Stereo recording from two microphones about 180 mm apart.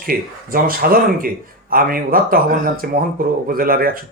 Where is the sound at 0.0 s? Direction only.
55° right (ahead or behind).